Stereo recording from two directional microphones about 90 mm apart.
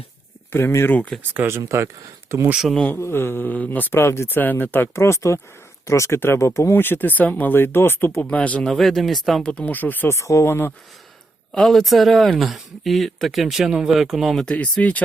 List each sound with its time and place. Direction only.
0.5 s speech: 30° left (ahead or behind)
1.3 s speech: 25° right (ahead or behind)
2.5 s speech: 5° right (ahead or behind)
2.9 s speech: 25° left (ahead or behind)
8.2 s speech: 15° left (ahead or behind)
10.2 s speech: 35° left (ahead or behind)
11.5 s speech: centre (ahead or behind)
14.4 s speech: 15° left (ahead or behind)